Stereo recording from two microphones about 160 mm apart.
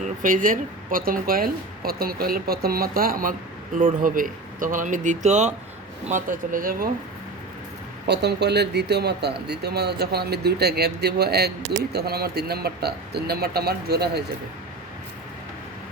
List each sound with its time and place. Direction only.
0.0 s speech: 55° right (ahead or behind)
8.0 s speech: 90° right